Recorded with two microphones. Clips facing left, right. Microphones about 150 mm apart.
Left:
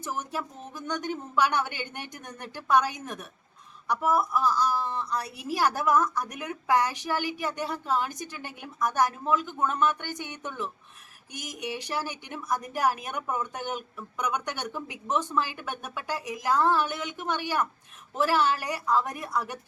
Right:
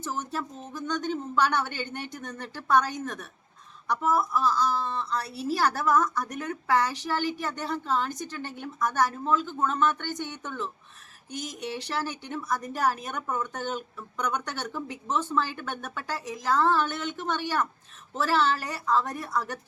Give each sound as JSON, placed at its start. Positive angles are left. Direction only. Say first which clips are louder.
{"t": 0.0, "sound": "a woman's voice", "louder": "right 1 dB", "side_deg": 10}